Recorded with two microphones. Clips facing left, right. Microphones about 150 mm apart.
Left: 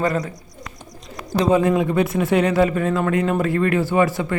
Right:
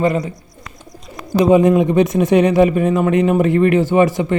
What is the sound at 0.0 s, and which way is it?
Speech, 10° right (ahead or behind).